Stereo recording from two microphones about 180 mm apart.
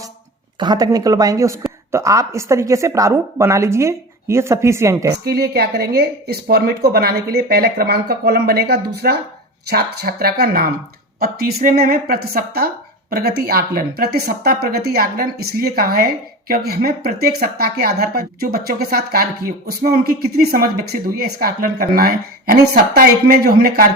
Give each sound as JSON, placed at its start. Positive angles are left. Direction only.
{"t": 0.6, "sound": "speech", "side_deg": -20}
{"t": 5.1, "sound": "a woman's voice", "side_deg": -60}